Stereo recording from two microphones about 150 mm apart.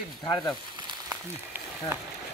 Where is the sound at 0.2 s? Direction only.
25° left (ahead or behind).